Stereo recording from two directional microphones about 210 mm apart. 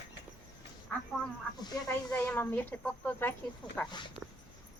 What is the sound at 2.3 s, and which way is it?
A woman's voice, 10° left (ahead or behind).